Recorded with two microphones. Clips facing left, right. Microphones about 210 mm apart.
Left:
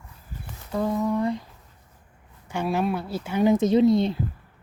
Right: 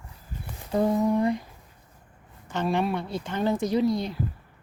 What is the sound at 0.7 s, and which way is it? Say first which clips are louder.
Humming: right 2 dB; 20° right (ahead or behind).